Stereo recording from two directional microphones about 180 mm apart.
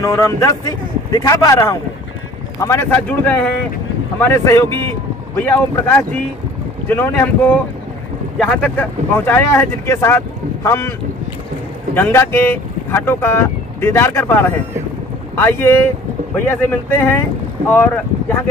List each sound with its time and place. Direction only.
0.0 s a man's voice: 20° left (ahead or behind)
4.6 s speech: 25° right (ahead or behind)
5.3 s speech: 10° left (ahead or behind)
11.9 s speech: 15° left (ahead or behind)